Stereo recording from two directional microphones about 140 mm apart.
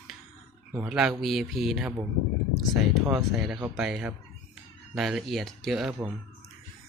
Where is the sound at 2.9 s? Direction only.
Centre (ahead or behind).